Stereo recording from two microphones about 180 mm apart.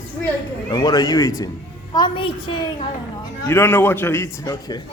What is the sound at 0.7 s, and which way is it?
A man's voice, 25° left (ahead or behind).